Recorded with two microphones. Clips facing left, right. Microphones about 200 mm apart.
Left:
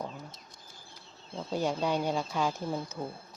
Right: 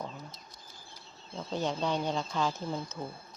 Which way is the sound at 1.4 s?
10° left (ahead or behind).